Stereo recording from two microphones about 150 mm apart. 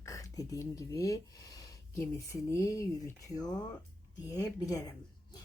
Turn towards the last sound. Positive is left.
turn(degrees=25)  # may be behind; listen again after turning